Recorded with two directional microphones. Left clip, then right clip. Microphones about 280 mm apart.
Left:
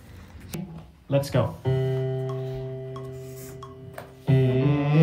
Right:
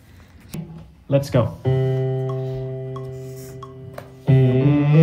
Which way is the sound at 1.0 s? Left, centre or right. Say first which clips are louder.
Right 5 dB; centre.